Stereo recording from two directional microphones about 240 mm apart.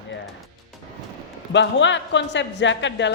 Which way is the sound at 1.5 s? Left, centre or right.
Left.